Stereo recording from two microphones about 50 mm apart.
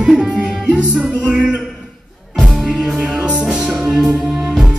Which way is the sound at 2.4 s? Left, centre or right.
Centre.